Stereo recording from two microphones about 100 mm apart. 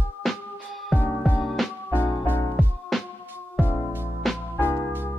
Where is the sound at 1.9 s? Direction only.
20° left (ahead or behind).